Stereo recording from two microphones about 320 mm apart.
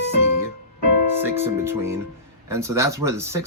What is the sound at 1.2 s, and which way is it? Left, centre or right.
Speech, centre.